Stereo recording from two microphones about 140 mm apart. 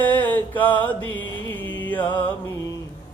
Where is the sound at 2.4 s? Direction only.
25° left (ahead or behind).